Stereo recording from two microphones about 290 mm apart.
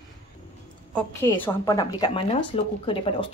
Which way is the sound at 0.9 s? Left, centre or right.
Centre.